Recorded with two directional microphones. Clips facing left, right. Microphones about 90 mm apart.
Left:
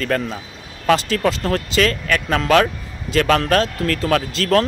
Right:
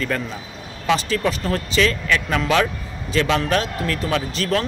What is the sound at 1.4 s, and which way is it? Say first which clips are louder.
Speech: left 2 dB; 45° left (ahead or behind).